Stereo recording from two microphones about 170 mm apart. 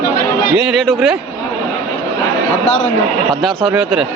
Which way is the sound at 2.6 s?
40° left (ahead or behind).